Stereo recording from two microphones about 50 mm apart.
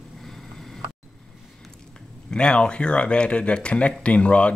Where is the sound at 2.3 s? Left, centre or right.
Centre.